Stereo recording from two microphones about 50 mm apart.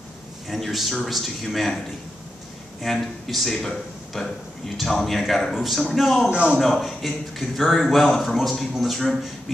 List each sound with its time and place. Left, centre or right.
0.5 s a man's voice: centre
2.8 s a man's voice: centre